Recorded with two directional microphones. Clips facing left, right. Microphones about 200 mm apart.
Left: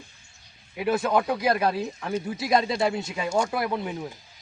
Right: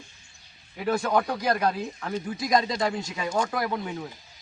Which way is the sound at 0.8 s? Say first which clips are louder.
Left 1 dB; 5° left (ahead or behind).